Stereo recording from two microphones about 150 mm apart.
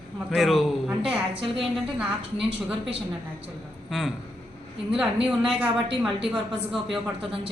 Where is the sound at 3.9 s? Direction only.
Centre (ahead or behind).